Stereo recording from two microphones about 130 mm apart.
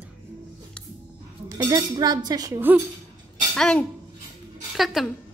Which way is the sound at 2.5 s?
15° right (ahead or behind).